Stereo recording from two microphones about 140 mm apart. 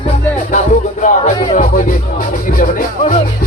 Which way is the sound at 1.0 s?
65° left (ahead or behind).